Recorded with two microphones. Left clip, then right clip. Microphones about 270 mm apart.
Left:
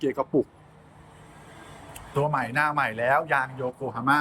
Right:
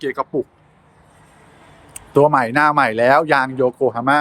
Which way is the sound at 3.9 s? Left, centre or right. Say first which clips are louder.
Right 6 dB; centre.